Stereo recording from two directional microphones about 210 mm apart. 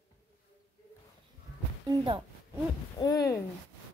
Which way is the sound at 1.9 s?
25° right (ahead or behind).